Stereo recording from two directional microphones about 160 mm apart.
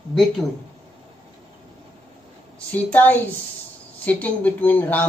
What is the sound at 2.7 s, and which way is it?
Speech, 10° left (ahead or behind).